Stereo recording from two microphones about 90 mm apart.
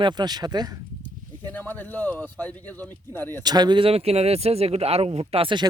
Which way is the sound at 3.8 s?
90° right.